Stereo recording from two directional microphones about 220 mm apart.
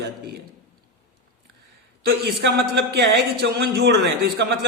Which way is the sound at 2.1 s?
50° right (ahead or behind).